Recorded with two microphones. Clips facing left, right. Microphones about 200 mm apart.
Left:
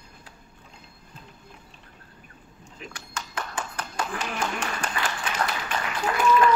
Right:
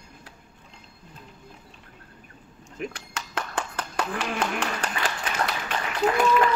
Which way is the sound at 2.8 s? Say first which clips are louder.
Right 5 dB; 60° right (ahead or behind).